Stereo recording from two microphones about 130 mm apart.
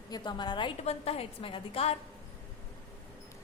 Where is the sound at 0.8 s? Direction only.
50° left (ahead or behind).